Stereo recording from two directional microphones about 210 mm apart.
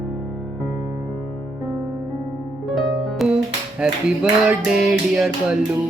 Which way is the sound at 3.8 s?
5° right (ahead or behind).